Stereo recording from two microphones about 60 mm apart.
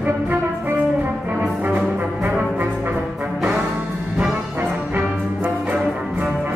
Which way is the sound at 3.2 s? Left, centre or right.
Right.